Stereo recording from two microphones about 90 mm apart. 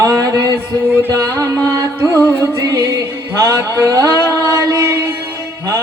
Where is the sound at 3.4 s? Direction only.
40° right (ahead or behind).